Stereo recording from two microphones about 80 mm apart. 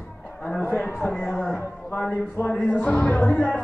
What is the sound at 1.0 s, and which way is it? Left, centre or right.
A man's voice, centre.